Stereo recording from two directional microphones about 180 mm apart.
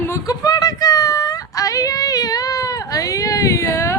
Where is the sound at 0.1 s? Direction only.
20° left (ahead or behind).